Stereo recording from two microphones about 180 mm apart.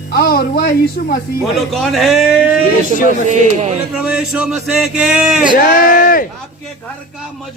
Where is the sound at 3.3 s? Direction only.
40° right (ahead or behind).